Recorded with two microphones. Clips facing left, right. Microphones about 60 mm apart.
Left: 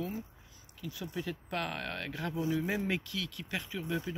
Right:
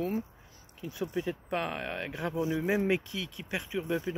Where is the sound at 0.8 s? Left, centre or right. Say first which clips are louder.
Right 5 dB; right.